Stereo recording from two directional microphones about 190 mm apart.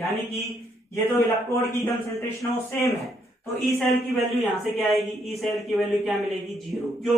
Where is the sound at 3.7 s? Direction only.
Centre (ahead or behind).